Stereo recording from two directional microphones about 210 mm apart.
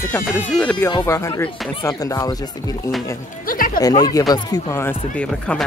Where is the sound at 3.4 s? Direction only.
40° left (ahead or behind).